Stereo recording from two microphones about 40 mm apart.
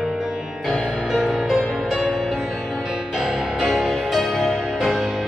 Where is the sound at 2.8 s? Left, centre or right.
Centre.